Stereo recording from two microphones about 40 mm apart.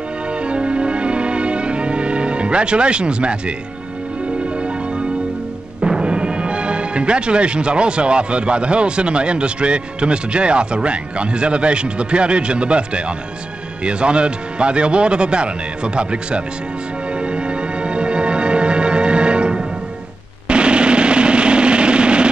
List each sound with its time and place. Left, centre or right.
0.3 s music: right
4.6 s music: right
5.8 s speech: right
17.1 s music: right
20.4 s a sound: right